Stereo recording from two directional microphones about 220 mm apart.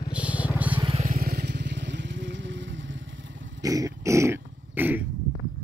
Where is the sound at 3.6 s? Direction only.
15° right (ahead or behind).